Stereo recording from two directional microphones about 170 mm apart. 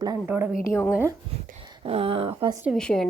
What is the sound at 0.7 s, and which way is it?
Speech, 15° left (ahead or behind).